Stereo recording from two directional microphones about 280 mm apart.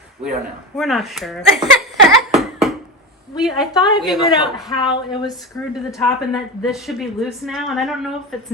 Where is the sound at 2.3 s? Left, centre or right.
Centre.